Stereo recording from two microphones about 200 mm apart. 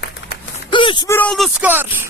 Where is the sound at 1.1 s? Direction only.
5° left (ahead or behind).